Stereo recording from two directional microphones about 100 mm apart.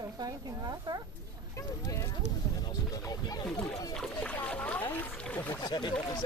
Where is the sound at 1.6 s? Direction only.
35° left (ahead or behind).